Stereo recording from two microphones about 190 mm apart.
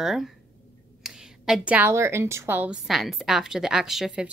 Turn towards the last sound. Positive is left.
turn(degrees=0)  # may be behind; listen again after turning